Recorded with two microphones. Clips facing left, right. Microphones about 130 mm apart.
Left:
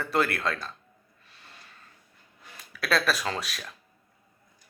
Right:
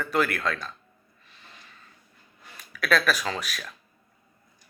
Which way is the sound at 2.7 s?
30° left (ahead or behind).